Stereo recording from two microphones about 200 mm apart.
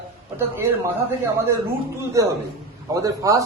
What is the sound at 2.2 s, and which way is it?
A man's voice, 15° right (ahead or behind).